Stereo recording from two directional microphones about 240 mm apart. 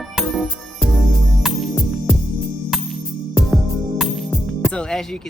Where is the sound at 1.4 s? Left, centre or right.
Centre.